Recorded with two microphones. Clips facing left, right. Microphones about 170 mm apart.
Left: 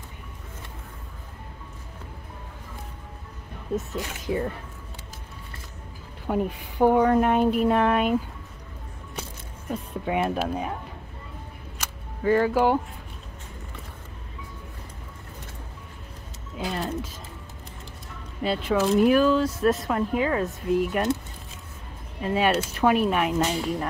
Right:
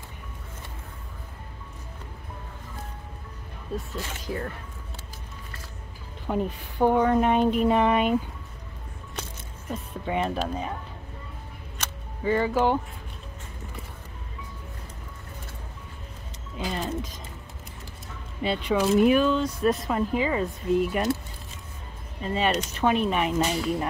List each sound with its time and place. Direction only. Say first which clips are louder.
3.7 s speech: left 4 dB; 20° left (ahead or behind)
6.2 s speech: left 2 dB; 10° left (ahead or behind)
10.0 s speech: left 2 dB; 5° left (ahead or behind)
11.8 s single-lens reflex camera: left 3 dB; 5° left (ahead or behind)
16.5 s speech: left 1 dB; centre (ahead or behind)
18.4 s speech: left 1 dB; centre (ahead or behind)
22.2 s speech: left 3 dB; 5° left (ahead or behind)